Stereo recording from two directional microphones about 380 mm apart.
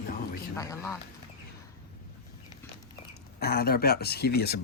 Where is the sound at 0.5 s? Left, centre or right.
Centre.